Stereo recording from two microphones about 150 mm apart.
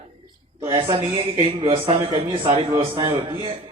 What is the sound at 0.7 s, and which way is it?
A man's voice, 30° right (ahead or behind).